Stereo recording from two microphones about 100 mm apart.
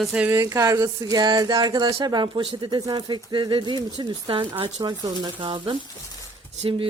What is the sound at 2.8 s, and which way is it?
Speech, 45° right (ahead or behind).